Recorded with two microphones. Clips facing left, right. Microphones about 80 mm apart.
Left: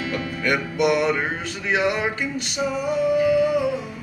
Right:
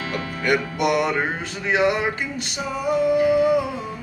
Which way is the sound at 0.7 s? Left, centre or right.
Right.